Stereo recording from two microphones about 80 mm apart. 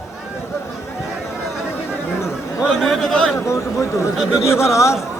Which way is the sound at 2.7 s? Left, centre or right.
Centre.